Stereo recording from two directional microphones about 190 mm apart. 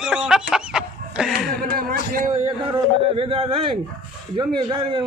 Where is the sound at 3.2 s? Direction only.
30° right (ahead or behind).